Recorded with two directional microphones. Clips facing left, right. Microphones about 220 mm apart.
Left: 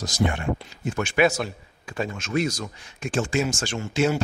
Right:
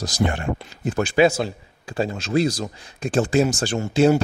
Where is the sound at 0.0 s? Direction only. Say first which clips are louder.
Right 2 dB; 35° right (ahead or behind).